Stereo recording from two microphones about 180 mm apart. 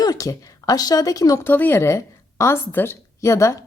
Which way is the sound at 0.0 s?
20° left (ahead or behind).